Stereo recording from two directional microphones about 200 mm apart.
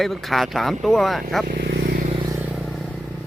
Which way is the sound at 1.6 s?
50° right (ahead or behind).